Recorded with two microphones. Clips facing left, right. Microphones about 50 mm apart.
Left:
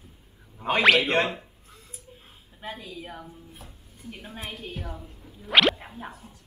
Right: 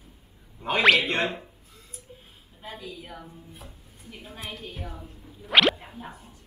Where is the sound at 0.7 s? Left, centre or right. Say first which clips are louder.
Even; centre.